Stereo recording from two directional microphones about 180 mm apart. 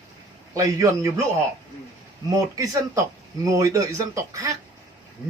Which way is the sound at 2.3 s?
20° right (ahead or behind).